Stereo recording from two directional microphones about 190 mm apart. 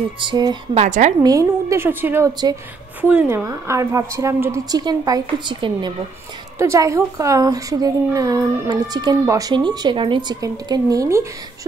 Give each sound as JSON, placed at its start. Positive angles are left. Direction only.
{"t": 0.2, "sound": "speech", "side_deg": -25}
{"t": 0.7, "sound": "a woman's voice", "side_deg": -40}
{"t": 1.2, "sound": "a woman's voice", "side_deg": -15}
{"t": 3.0, "sound": "a woman's voice", "side_deg": -10}